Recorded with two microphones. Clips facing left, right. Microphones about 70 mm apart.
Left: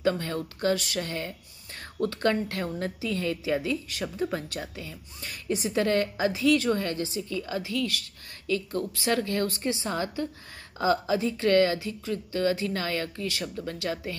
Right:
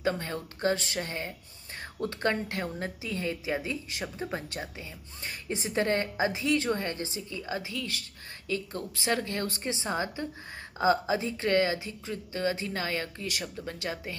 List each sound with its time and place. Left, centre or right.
0.0 s a woman's voice: centre